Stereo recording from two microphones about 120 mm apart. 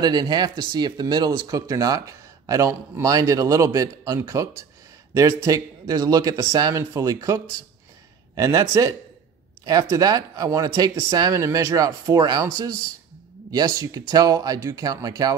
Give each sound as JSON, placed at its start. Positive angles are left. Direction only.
{"t": 0.0, "sound": "speech", "side_deg": -35}
{"t": 13.5, "sound": "speech", "side_deg": -35}